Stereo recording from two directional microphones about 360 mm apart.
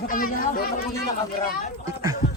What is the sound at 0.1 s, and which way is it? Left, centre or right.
Speech, left.